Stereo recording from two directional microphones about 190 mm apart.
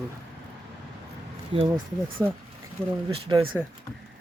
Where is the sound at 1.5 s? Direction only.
30° right (ahead or behind).